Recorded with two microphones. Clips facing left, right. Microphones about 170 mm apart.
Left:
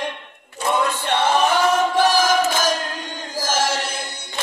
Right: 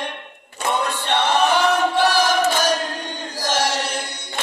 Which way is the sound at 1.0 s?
45° left (ahead or behind).